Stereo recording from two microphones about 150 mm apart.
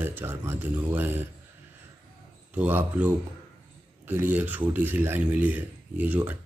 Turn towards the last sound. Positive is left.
turn(degrees=-10)  # may be behind; listen again after turning